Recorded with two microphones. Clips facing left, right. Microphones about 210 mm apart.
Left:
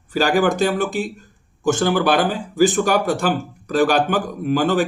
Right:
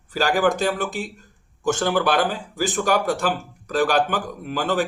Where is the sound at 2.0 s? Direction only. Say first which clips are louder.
Left 3 dB; 10° left (ahead or behind).